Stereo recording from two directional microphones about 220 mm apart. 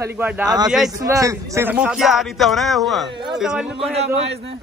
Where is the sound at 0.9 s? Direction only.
15° right (ahead or behind).